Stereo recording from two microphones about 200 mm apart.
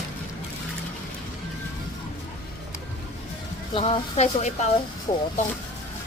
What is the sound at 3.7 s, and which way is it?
A woman's voice, 30° left (ahead or behind).